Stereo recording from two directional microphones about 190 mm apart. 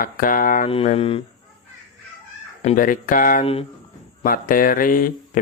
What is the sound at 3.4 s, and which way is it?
Speech, 30° left (ahead or behind).